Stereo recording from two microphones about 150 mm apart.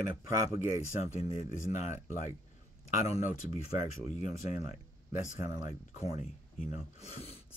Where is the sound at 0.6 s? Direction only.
50° left (ahead or behind).